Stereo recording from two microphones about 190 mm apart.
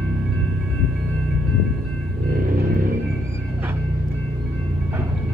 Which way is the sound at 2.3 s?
50° right (ahead or behind).